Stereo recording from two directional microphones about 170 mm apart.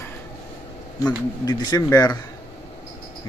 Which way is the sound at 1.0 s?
25° left (ahead or behind).